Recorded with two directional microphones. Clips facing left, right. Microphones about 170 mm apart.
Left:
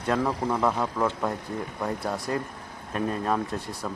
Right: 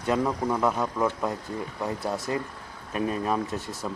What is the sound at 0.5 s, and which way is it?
Speech, centre (ahead or behind).